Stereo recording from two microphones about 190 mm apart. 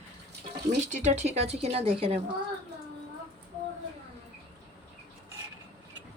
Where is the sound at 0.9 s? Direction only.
40° right (ahead or behind).